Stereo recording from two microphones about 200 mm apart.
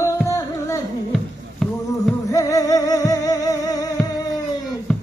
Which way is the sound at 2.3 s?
15° left (ahead or behind).